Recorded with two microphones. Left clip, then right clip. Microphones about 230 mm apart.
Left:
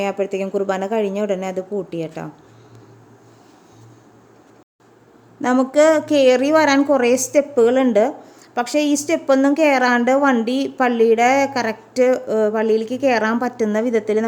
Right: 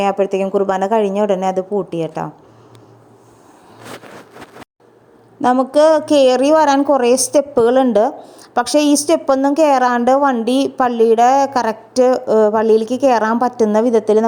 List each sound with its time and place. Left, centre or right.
0.0 s a woman's voice: centre
5.4 s a woman's voice: centre